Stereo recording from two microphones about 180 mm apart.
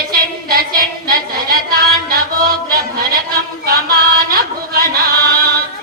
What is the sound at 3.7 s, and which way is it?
Music, 55° right (ahead or behind).